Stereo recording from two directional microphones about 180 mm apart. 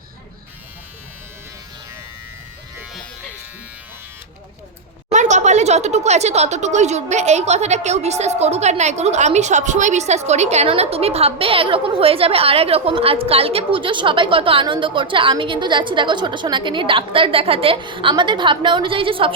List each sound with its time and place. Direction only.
5.0 s speech: 40° right (ahead or behind)